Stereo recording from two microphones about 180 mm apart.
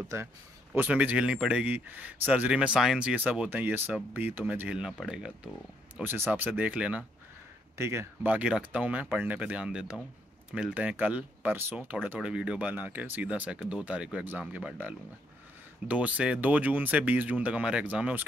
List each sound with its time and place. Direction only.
0.1 s speech: 15° right (ahead or behind)